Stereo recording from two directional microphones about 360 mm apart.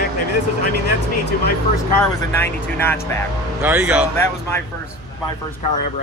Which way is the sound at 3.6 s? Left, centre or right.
Centre.